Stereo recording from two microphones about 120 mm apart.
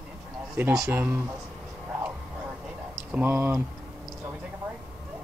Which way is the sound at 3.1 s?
15° right (ahead or behind).